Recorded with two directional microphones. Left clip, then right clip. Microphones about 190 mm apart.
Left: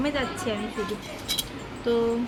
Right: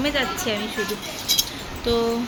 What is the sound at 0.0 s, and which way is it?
Speech, 10° left (ahead or behind).